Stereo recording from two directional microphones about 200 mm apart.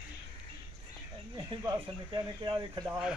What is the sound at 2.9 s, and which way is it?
Speech, 5° right (ahead or behind).